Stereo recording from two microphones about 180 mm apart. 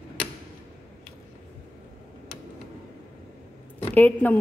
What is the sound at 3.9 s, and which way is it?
Speech, 10° left (ahead or behind).